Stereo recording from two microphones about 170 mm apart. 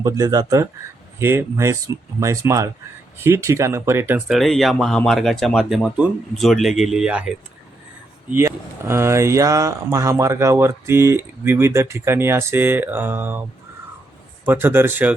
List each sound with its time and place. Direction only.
0.0 s speech: 20° right (ahead or behind)
4.4 s speech: centre (ahead or behind)
14.4 s speech: 10° right (ahead or behind)